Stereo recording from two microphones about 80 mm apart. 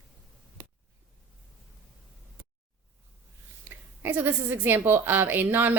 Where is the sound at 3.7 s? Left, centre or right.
Right.